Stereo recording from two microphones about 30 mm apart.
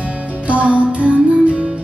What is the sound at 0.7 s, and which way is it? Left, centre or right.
Music, right.